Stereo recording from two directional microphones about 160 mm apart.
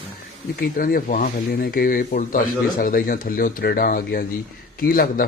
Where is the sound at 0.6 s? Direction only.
65° left (ahead or behind).